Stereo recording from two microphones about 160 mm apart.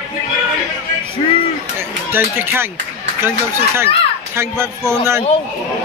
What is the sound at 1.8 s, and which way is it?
A man's voice, 15° right (ahead or behind).